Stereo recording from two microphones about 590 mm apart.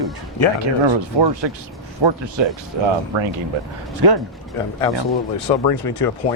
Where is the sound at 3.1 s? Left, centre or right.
Right.